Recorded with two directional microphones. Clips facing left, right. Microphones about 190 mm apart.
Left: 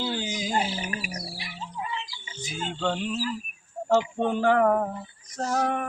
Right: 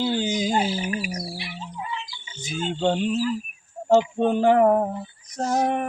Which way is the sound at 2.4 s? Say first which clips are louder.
Right 5 dB; 25° right (ahead or behind).